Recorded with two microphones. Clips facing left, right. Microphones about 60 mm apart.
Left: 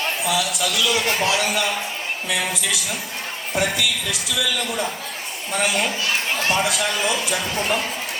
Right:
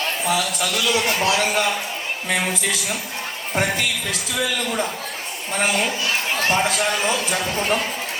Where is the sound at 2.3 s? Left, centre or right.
Right.